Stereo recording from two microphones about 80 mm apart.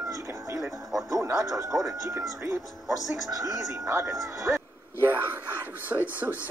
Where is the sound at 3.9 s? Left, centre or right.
Right.